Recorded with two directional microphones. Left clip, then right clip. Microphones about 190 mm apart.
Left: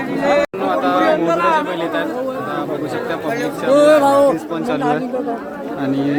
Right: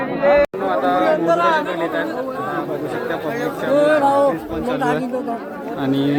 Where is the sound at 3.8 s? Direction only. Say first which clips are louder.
Left 4 dB; 60° left (ahead or behind).